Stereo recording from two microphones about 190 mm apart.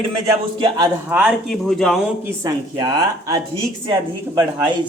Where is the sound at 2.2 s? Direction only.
20° right (ahead or behind).